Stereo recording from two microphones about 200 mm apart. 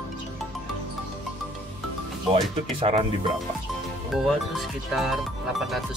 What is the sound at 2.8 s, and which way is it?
Speech, 30° right (ahead or behind).